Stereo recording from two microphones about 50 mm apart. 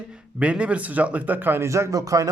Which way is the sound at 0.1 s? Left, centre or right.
Right.